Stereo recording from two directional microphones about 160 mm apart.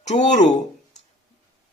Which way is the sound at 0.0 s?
45° left (ahead or behind).